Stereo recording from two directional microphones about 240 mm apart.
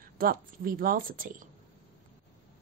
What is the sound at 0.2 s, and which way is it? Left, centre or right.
A woman's voice, right.